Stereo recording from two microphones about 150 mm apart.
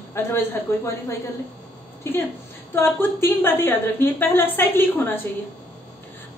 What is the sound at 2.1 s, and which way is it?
A woman's voice, 15° left (ahead or behind).